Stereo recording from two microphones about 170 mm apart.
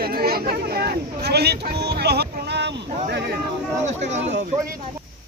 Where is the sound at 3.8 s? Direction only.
45° right (ahead or behind).